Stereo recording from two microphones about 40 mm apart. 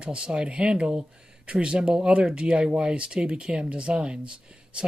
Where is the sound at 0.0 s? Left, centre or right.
Right.